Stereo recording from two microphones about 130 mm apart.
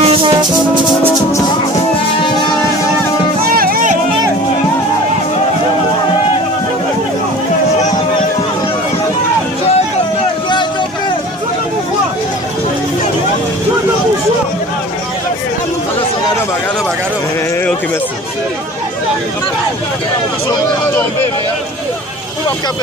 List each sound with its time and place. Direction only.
0.0 s music: 45° right (ahead or behind)
3.5 s music: 90° right